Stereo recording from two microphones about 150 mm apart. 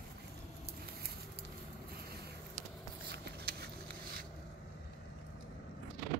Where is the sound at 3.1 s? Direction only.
90° right.